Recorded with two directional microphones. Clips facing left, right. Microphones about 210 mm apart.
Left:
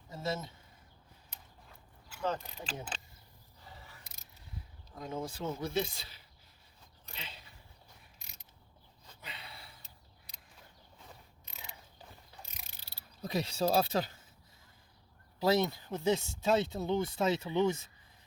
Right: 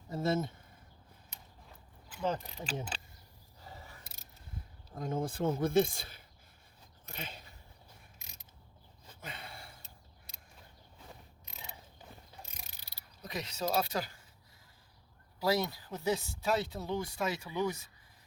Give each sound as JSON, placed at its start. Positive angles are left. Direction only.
{"t": 0.1, "sound": "speech", "side_deg": -55}
{"t": 2.1, "sound": "speech", "side_deg": -15}
{"t": 4.9, "sound": "speech", "side_deg": -50}
{"t": 9.2, "sound": "gasp", "side_deg": -50}
{"t": 13.2, "sound": "speech", "side_deg": 30}
{"t": 15.4, "sound": "speech", "side_deg": 25}